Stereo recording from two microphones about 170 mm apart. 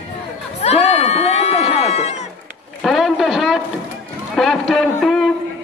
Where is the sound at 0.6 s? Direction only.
40° left (ahead or behind).